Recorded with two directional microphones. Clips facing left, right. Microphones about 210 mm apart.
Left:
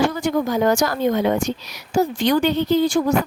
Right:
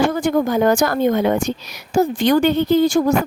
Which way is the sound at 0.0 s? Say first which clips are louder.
Right 3 dB; 50° right (ahead or behind).